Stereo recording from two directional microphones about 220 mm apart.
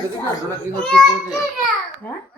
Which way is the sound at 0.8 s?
Centre (ahead or behind).